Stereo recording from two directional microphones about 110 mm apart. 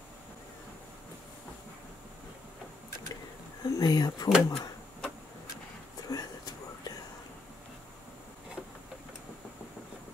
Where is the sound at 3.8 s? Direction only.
35° left (ahead or behind).